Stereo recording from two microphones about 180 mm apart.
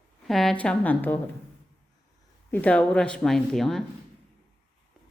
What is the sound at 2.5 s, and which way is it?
Speech, 10° left (ahead or behind).